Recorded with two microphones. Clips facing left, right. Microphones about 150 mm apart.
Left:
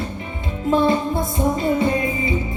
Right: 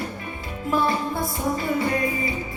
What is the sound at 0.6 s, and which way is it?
Music, 20° left (ahead or behind).